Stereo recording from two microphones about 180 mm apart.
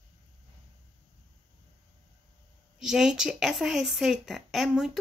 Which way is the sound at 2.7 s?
5° right (ahead or behind).